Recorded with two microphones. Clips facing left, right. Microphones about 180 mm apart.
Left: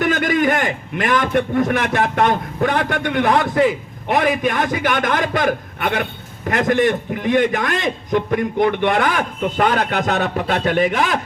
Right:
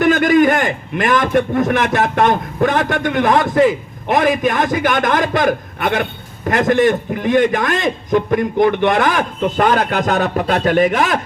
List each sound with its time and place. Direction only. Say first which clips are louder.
0.0 s a man's voice: right 6 dB; 45° right (ahead or behind)